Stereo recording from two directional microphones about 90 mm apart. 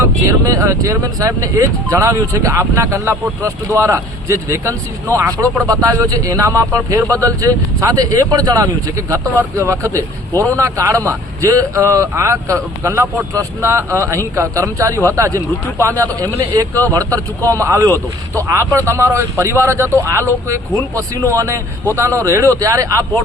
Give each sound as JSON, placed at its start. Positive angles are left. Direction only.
{"t": 0.0, "sound": "speech", "side_deg": -35}